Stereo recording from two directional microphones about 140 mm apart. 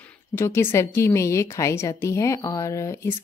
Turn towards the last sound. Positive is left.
turn(degrees=20)  # may be behind; listen again after turning